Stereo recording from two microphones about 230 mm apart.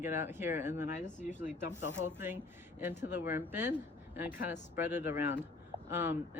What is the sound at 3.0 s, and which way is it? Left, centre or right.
Speech, centre.